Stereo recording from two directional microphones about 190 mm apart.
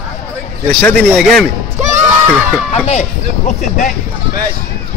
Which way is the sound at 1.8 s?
35° right (ahead or behind).